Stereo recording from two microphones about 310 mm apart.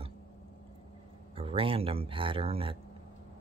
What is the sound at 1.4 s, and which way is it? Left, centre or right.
Speech, centre.